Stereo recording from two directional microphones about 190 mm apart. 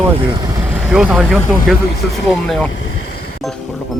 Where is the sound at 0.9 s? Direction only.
5° right (ahead or behind).